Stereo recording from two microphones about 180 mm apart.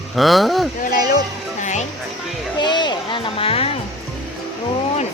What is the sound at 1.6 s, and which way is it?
Music, 40° left (ahead or behind).